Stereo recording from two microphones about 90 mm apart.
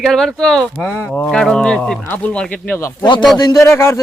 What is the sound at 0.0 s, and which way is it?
Speech, 5° left (ahead or behind).